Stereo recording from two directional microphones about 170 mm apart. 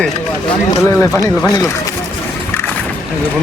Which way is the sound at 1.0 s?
20° left (ahead or behind).